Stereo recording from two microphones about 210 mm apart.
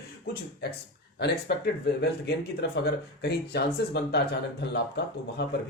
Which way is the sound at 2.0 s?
55° left (ahead or behind).